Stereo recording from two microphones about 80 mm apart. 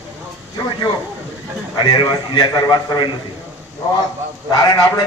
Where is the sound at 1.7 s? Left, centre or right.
Left.